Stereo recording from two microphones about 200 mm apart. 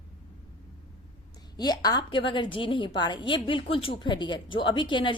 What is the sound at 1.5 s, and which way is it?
A woman's voice, 20° left (ahead or behind).